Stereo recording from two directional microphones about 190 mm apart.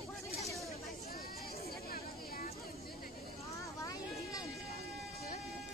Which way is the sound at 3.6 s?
15° left (ahead or behind).